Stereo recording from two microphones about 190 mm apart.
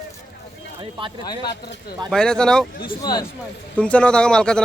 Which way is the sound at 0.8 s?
25° right (ahead or behind).